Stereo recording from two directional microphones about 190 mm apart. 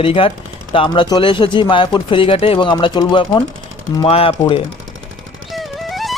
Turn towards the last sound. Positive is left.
turn(degrees=0)  # may be behind; listen again after turning